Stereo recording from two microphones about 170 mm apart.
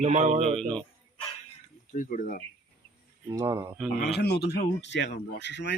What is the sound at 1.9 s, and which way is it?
Speech, 55° left (ahead or behind).